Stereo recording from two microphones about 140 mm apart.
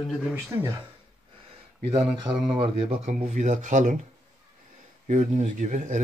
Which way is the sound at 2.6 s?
50° right (ahead or behind).